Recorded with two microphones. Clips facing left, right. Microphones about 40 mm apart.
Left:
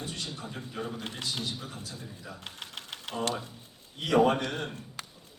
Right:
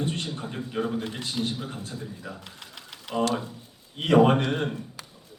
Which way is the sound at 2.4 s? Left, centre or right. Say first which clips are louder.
Left 2 dB; left.